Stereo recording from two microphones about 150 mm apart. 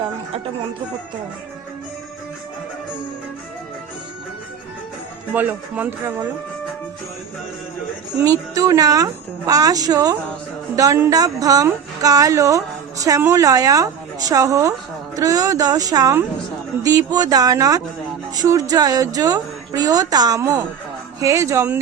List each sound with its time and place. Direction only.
5.3 s speech: 10° right (ahead or behind)
8.2 s speech: 25° right (ahead or behind)